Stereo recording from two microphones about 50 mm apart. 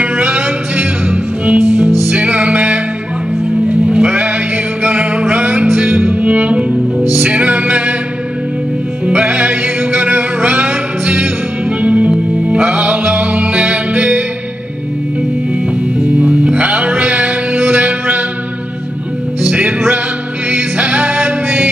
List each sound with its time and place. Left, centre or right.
0.0 s music: right
9.0 s music: right
16.2 s music: right
20.5 s music: right